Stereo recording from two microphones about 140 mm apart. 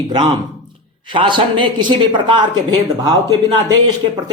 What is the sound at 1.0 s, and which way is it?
Speech, 35° right (ahead or behind).